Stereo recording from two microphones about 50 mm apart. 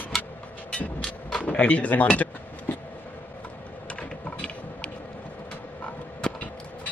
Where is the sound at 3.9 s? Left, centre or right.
Left.